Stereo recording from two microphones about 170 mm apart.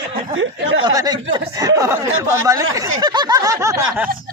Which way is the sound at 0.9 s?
25° right (ahead or behind).